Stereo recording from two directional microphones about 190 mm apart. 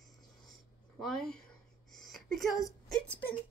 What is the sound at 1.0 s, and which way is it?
Speech, centre (ahead or behind).